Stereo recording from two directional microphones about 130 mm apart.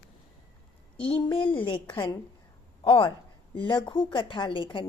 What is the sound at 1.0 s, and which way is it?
A woman's voice, 40° left (ahead or behind).